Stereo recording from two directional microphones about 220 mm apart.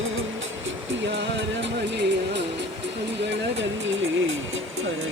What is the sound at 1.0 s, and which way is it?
Music, 55° right (ahead or behind).